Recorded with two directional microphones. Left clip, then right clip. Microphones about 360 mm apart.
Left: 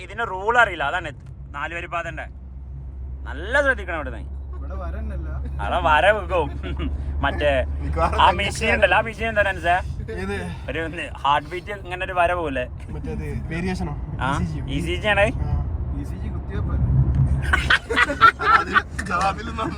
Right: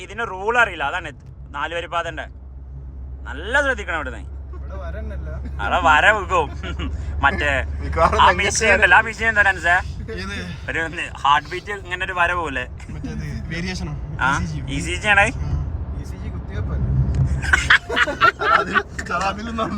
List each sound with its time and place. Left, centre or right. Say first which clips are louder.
0.0 s speech: even; centre
3.2 s speech: even; centre
5.5 s speech: right 3 dB; centre
10.2 s speech: left 2 dB; centre
10.7 s speech: right 4 dB; centre
13.1 s a man's voice: left 1 dB; centre
14.2 s a man's voice: right 5 dB; centre
17.4 s dog: right 4 dB; centre
18.2 s a sound: left 2 dB; centre
19.0 s speech: even; centre